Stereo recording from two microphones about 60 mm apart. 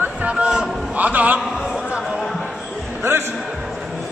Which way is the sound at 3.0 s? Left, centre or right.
Right.